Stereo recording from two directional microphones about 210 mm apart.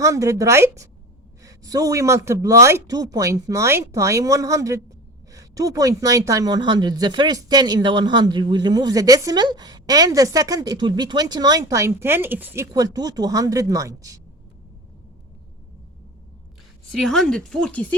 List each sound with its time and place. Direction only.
0.0 s speech: 15° right (ahead or behind)
16.9 s speech: centre (ahead or behind)